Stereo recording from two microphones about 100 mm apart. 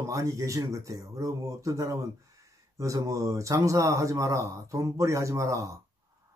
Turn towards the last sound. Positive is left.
turn(degrees=-35)  # may be behind; listen again after turning